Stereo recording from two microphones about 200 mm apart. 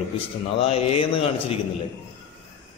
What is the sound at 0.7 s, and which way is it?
Speech, 30° left (ahead or behind).